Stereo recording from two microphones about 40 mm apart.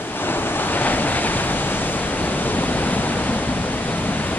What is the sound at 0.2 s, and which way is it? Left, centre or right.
Waves, left.